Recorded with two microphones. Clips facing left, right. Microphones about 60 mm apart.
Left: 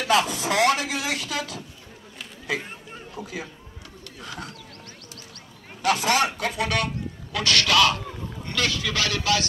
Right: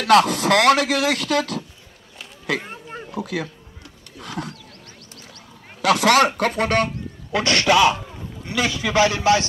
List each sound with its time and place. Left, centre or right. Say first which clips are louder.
0.0 s speech: right 7 dB; right
3.2 s speech: right 8 dB; right
5.9 s speech: right 6 dB; right
7.3 s a man's voice: right 4 dB; right